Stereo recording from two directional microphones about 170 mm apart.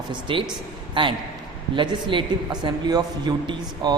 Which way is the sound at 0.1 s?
30° right (ahead or behind).